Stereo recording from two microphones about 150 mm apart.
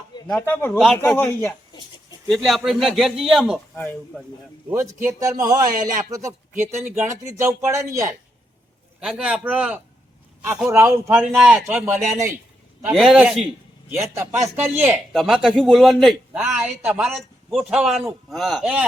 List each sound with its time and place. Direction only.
0.3 s speech: 15° left (ahead or behind)
0.8 s a man's voice: centre (ahead or behind)
1.1 s speech: 15° left (ahead or behind)
2.2 s a man's voice: centre (ahead or behind)
4.7 s a man's voice: 20° right (ahead or behind)
5.7 s speech: 65° right (ahead or behind)
6.1 s a man's voice: 20° right (ahead or behind)
9.0 s a man's voice: 5° right (ahead or behind)
13.9 s a man's voice: 15° right (ahead or behind)